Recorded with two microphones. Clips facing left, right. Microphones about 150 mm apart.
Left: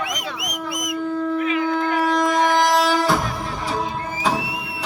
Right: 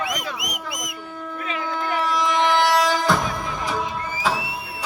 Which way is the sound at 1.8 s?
45° left (ahead or behind).